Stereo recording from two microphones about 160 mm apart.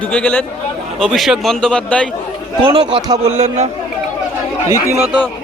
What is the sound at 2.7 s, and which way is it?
Speech, 30° right (ahead or behind).